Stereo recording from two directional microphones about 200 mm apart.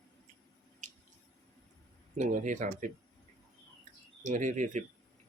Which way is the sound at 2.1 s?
40° right (ahead or behind).